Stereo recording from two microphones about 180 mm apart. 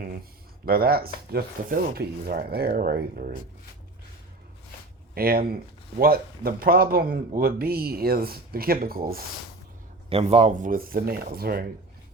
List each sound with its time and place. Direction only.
0.6 s speech: 55° right (ahead or behind)
5.1 s speech: 55° right (ahead or behind)
10.1 s a man's voice: 30° right (ahead or behind)
10.7 s speech: 55° right (ahead or behind)